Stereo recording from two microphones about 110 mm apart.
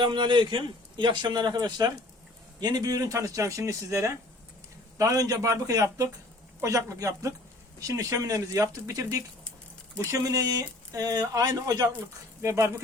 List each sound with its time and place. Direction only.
0.0 s a man's voice: 45° right (ahead or behind); by 12.8 s 25° right (ahead or behind)